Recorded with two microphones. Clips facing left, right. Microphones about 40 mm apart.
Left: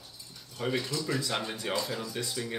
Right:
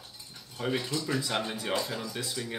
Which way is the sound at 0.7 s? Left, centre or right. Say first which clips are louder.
Even; centre.